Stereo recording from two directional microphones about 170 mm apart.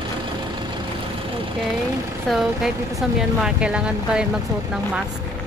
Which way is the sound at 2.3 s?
Centre (ahead or behind).